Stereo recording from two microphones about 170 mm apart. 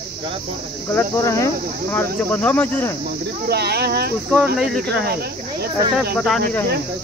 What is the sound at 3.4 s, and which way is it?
Speech, 70° right (ahead or behind).